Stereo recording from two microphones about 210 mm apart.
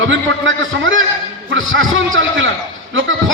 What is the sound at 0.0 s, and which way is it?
A man's voice, 60° right (ahead or behind).